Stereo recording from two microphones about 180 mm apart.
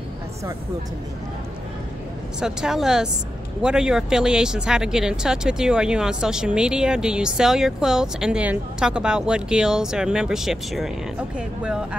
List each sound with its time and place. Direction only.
2.4 s speech: 5° right (ahead or behind)